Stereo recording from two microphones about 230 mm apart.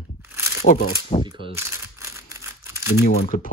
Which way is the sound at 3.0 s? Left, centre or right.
Left.